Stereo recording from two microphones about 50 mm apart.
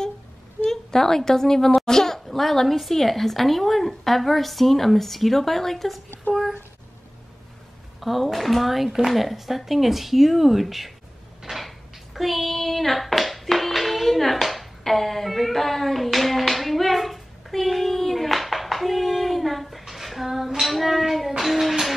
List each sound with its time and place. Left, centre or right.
0.7 s a woman's voice: centre
6.3 s a child's voice: left
8.0 s speech: centre
11.4 s hands: centre
19.9 s child singing: centre